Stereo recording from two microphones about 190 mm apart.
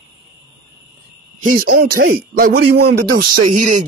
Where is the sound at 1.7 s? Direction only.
50° right (ahead or behind).